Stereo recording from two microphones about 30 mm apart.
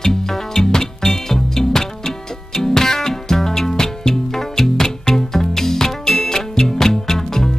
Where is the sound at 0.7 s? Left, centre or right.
Centre.